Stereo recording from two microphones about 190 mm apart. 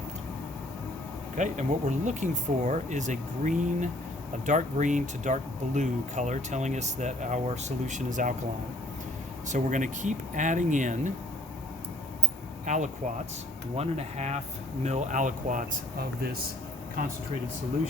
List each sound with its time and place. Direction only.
1.4 s speech: 40° right (ahead or behind)
9.5 s speech: 40° right (ahead or behind)
12.6 s speech: 40° right (ahead or behind)